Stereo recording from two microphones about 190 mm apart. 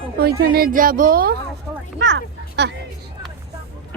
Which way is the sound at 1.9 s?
70° right (ahead or behind).